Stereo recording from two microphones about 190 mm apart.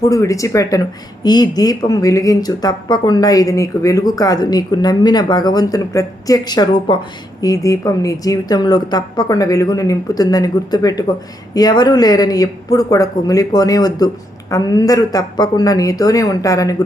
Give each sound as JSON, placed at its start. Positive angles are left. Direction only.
{"t": 0.0, "sound": "speech", "side_deg": 15}